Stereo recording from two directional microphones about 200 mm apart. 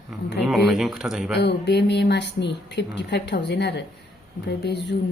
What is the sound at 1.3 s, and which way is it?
A woman's voice, 55° left (ahead or behind).